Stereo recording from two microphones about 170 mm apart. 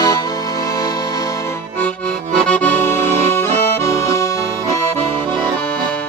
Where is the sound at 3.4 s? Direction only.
15° left (ahead or behind).